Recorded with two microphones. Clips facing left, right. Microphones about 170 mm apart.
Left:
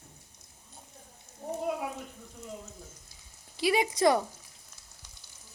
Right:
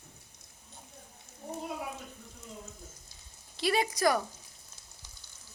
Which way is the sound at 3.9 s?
25° left (ahead or behind).